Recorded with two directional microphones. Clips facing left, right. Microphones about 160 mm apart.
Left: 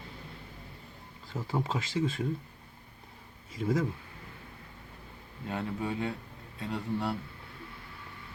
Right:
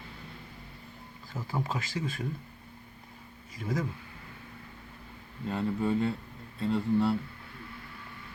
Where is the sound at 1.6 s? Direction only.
25° left (ahead or behind).